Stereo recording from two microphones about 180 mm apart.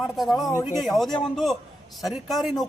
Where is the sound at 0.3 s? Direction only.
20° left (ahead or behind).